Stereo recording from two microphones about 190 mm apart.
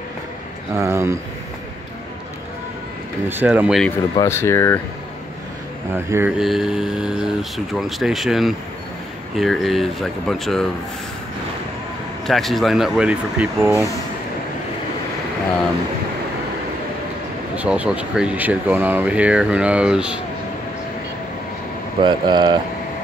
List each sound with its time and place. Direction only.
0.7 s speech: 15° right (ahead or behind)
3.3 s speech: 10° right (ahead or behind)
4.2 s speech: 15° left (ahead or behind)
6.0 s speech: 10° right (ahead or behind)
12.3 s speech: centre (ahead or behind)
17.6 s speech: 5° right (ahead or behind)
22.0 s speech: 25° right (ahead or behind)